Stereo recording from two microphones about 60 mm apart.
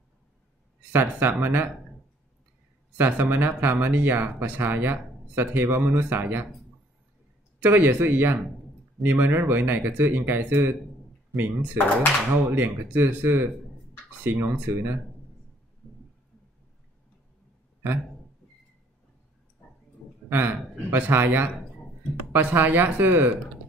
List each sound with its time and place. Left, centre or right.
0.9 s speech: right
3.0 s speech: right
7.6 s speech: right
20.2 s speech: right